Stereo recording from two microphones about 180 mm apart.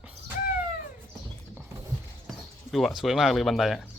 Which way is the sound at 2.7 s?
Centre (ahead or behind).